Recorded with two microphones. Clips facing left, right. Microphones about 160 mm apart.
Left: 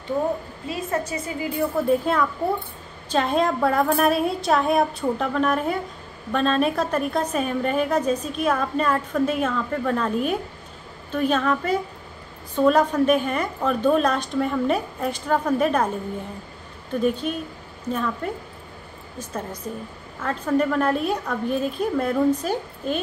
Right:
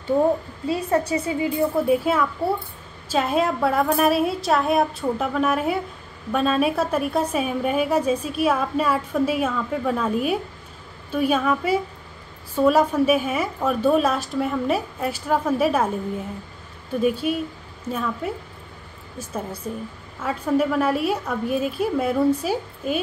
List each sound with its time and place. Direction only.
0.7 s a woman's voice: 30° right (ahead or behind)
1.9 s a woman's voice: 5° right (ahead or behind)
17.0 s a woman's voice: 5° right (ahead or behind)